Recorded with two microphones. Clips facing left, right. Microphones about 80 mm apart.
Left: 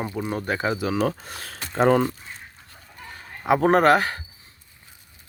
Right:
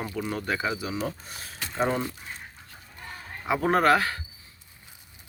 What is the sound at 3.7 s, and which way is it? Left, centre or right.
Speech, left.